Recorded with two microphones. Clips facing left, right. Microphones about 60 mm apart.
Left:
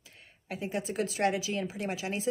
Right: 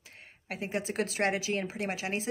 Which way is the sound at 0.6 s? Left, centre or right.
Right.